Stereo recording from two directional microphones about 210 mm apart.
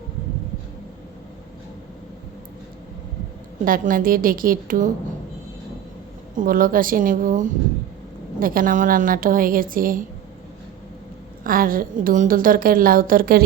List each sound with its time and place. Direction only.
3.6 s a woman's voice: 40° right (ahead or behind)
6.3 s a woman's voice: 40° right (ahead or behind)
11.4 s a woman's voice: 40° right (ahead or behind)